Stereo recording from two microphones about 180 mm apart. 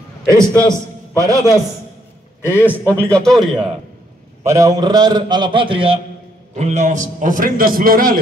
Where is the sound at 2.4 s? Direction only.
15° left (ahead or behind).